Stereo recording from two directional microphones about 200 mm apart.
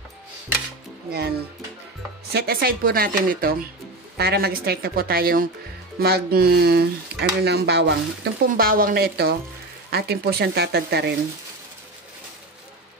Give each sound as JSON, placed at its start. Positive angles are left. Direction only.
{"t": 2.3, "sound": "speech", "side_deg": -50}